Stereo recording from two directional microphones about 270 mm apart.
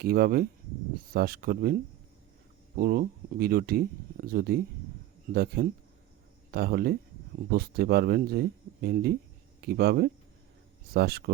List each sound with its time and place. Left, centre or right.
0.0 s speech: right
2.7 s speech: right